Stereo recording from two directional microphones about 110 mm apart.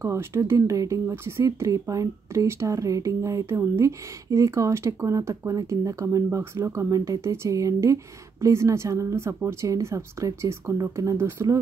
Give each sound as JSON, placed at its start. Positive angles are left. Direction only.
{"t": 0.0, "sound": "speech", "side_deg": -25}